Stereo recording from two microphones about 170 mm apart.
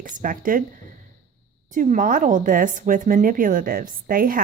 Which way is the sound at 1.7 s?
50° right (ahead or behind).